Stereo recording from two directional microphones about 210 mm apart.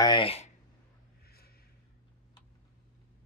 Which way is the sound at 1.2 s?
45° left (ahead or behind).